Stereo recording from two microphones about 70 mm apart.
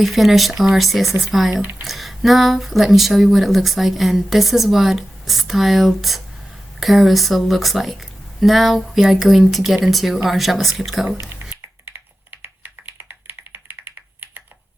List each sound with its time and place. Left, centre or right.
0.0 s speech: centre
11.9 s computer keyboard: right